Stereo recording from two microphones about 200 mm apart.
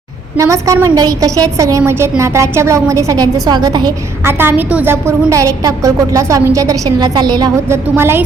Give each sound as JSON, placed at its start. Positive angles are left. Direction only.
{"t": 0.3, "sound": "a woman's voice", "side_deg": -15}